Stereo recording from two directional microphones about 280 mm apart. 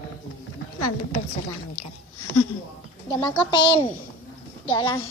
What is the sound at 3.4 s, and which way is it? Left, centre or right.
A child's voice, centre.